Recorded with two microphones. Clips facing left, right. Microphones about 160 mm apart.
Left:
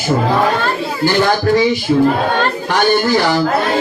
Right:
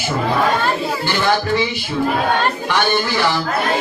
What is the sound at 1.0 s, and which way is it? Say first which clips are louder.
Speech: left 6 dB; 40° left (ahead or behind).